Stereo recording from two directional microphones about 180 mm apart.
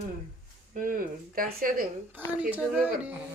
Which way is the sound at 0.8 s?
50° right (ahead or behind).